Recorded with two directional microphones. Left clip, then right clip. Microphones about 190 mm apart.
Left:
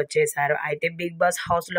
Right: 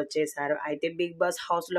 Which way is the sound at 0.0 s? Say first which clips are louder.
Left 7 dB; 30° left (ahead or behind).